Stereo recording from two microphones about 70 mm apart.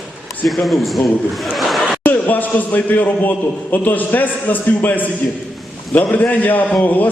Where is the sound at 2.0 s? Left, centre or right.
Left.